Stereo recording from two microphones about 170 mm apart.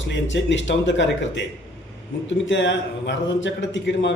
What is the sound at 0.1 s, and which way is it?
Speech, 90° left.